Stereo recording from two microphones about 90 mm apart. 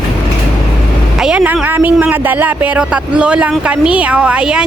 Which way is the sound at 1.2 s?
10° right (ahead or behind).